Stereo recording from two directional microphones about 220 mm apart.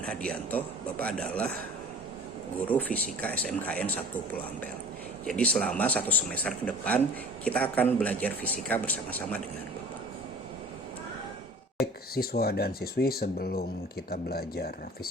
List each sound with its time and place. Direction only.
0.1 s a man's voice: 5° left (ahead or behind)
2.6 s speech: 5° left (ahead or behind)
5.2 s speech: 5° left (ahead or behind)
11.8 s speech: 45° left (ahead or behind)